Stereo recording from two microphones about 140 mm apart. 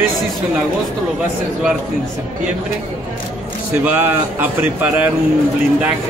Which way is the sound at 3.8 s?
10° right (ahead or behind).